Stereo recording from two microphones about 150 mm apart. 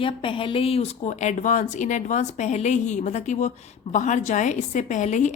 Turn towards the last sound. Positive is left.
turn(degrees=55)  # may be behind; listen again after turning